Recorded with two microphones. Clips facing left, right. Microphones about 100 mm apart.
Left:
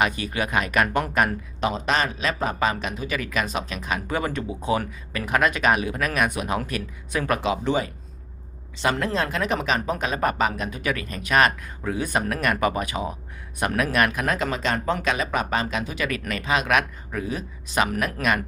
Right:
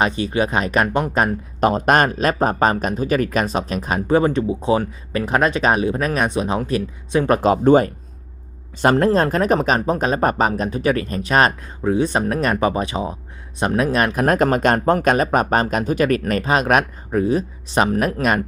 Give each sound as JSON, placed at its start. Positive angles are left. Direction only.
{"t": 0.0, "sound": "speech", "side_deg": -30}
{"t": 1.6, "sound": "speech", "side_deg": -50}
{"t": 14.3, "sound": "speech", "side_deg": -50}